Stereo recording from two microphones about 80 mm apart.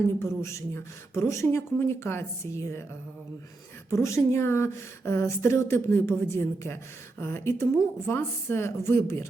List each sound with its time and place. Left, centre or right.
0.2 s speech: left
3.8 s speech: left